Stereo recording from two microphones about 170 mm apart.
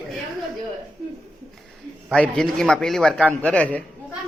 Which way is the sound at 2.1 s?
5° left (ahead or behind).